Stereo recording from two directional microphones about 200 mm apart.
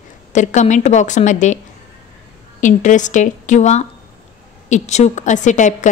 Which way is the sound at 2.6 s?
40° left (ahead or behind).